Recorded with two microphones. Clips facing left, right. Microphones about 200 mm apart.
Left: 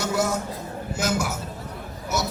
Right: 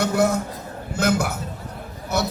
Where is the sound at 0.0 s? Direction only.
60° right (ahead or behind).